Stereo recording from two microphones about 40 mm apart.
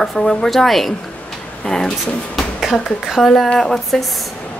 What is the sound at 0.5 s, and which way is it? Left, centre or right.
Speech, centre.